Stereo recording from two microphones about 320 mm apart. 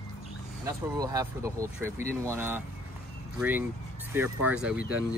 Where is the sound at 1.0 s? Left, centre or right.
Centre.